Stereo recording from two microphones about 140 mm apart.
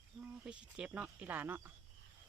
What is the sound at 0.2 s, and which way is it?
Speech, 10° right (ahead or behind).